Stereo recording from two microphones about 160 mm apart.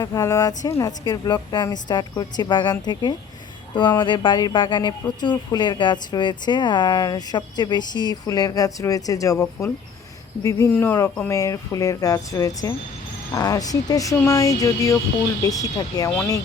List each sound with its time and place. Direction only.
0.0 s speech: 20° left (ahead or behind)